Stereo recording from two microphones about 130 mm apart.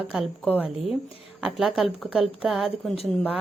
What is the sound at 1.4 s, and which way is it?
A woman's voice, 5° right (ahead or behind).